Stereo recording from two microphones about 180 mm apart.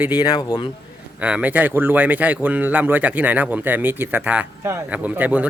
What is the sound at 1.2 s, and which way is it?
Speech, 10° right (ahead or behind).